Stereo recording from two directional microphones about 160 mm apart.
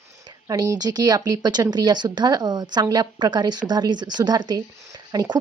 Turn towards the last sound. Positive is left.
turn(degrees=-25)  # may be behind; listen again after turning